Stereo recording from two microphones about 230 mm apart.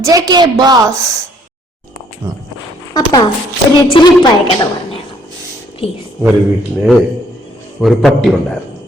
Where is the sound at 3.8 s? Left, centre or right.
Left.